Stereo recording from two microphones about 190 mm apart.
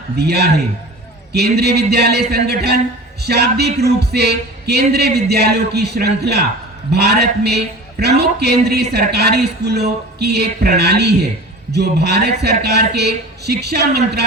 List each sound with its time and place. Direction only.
0.2 s speech: 60° right (ahead or behind)
1.5 s speech: 60° right (ahead or behind)